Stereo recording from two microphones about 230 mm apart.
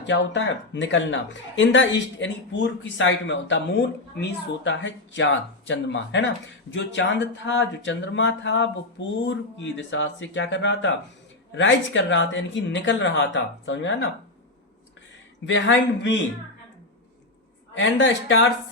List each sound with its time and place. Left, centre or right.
0.0 s speech: left
15.4 s speech: left
17.7 s speech: left